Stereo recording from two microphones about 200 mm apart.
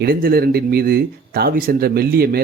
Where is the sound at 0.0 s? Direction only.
50° right (ahead or behind).